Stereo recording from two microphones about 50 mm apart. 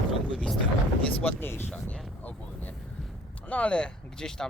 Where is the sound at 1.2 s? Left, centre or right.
Left.